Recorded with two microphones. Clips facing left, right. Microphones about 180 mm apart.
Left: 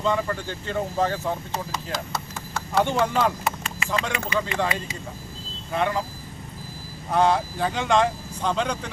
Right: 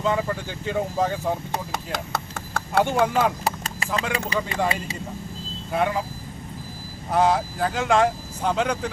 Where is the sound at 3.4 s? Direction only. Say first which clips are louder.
Right 1 dB; 35° right (ahead or behind).